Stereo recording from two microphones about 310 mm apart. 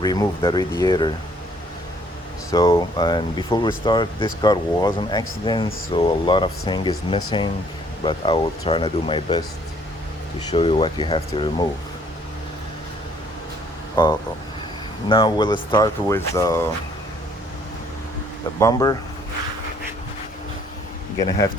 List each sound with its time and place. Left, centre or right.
0.0 s speech: centre
2.5 s speech: centre
10.5 s speech: centre
13.9 s speech: centre
18.6 s speech: centre